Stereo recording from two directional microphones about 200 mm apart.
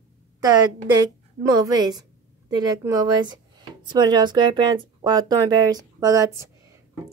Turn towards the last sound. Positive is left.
turn(degrees=-15)  # may be behind; listen again after turning